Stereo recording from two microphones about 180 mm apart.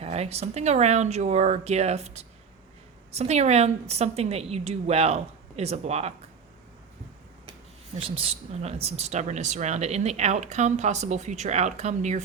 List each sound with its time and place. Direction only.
0.0 s speech: 35° right (ahead or behind)
7.9 s speech: 30° right (ahead or behind)